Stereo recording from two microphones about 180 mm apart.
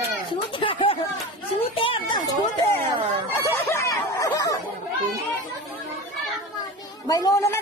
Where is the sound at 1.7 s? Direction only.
30° left (ahead or behind).